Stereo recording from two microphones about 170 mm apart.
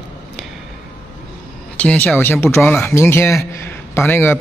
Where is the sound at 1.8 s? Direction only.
10° left (ahead or behind).